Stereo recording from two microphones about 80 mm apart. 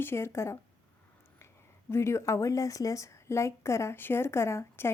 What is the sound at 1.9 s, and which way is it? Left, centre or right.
A woman's voice, left.